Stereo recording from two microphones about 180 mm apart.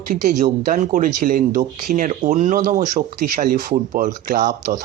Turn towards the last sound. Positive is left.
turn(degrees=-45)  # may be behind; listen again after turning